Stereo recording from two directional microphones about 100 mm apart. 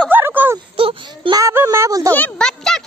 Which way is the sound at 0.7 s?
65° right (ahead or behind).